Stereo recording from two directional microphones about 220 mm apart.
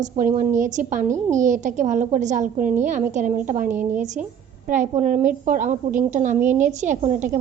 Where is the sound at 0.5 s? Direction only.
35° right (ahead or behind).